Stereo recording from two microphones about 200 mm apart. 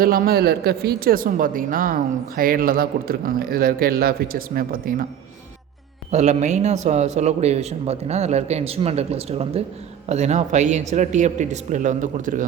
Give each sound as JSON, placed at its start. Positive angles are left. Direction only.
{"t": 0.0, "sound": "speech", "side_deg": -50}
{"t": 6.1, "sound": "a man's voice", "side_deg": -35}